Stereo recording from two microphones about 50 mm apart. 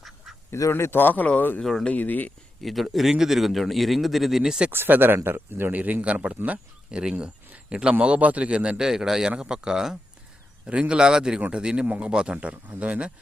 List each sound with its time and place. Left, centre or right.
0.5 s a man's voice: left
1.6 s speech: centre
1.9 s speech: left
2.6 s a man's voice: centre
4.7 s speech: right
5.7 s speech: right
8.8 s speech: centre; by 13.1 s right